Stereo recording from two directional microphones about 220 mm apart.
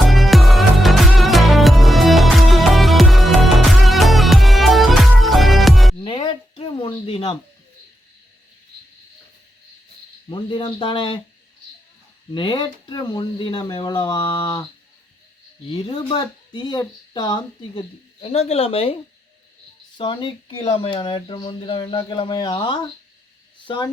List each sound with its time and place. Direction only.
0.0 s music: centre (ahead or behind)
6.0 s a sound: 25° left (ahead or behind)
10.2 s speech: 20° left (ahead or behind)
12.3 s speech: 20° left (ahead or behind)
15.7 s speech: 20° left (ahead or behind)
20.0 s speech: 20° left (ahead or behind)